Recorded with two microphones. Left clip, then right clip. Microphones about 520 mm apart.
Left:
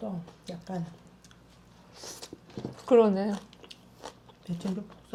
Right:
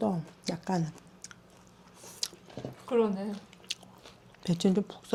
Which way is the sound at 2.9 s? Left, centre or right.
Left.